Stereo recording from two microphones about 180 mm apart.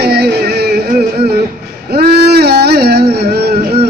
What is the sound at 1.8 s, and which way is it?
Music, 60° right (ahead or behind).